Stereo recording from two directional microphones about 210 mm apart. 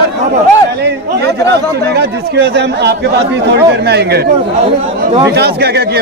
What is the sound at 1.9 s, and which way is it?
Speech, 50° right (ahead or behind).